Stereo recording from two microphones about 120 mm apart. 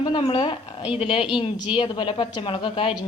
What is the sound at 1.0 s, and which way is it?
A woman's voice, 50° left (ahead or behind).